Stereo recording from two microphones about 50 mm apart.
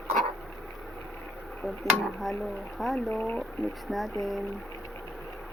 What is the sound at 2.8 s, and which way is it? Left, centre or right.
Speech, centre.